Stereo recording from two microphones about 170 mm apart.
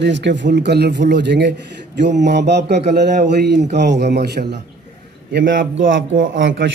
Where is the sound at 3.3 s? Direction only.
80° right.